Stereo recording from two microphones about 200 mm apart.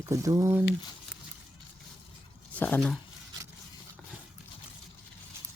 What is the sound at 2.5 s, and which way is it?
Speech, 5° left (ahead or behind).